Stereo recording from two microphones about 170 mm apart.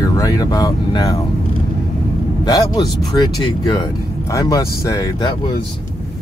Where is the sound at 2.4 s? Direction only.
25° left (ahead or behind).